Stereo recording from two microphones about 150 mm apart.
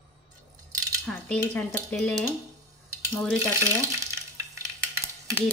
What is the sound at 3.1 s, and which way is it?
Speech, 5° left (ahead or behind).